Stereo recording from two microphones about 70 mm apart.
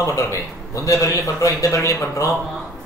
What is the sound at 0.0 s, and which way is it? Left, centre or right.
A man's voice, left.